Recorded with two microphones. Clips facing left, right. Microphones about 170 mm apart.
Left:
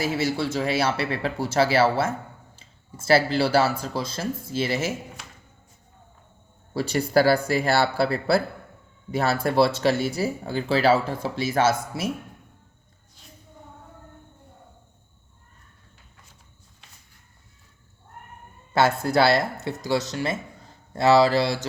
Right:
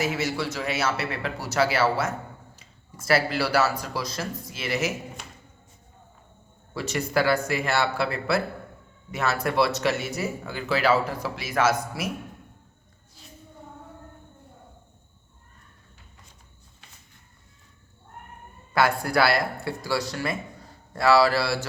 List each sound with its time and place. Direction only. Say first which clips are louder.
0.0 s speech: left 2 dB; 30° left (ahead or behind)
6.7 s speech: left 5 dB; 35° left (ahead or behind)
18.7 s speech: left 2 dB; 25° left (ahead or behind)